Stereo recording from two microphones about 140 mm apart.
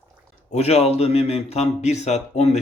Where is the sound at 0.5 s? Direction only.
50° left (ahead or behind).